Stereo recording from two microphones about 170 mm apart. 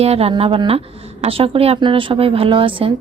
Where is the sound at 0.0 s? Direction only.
35° right (ahead or behind).